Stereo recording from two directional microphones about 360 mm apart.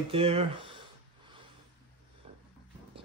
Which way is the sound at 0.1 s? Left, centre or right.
Centre.